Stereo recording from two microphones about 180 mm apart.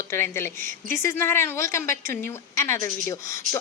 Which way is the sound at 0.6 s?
50° right (ahead or behind).